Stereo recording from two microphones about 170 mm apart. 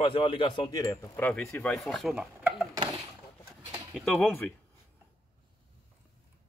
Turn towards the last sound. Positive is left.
turn(degrees=10)  # may be behind; listen again after turning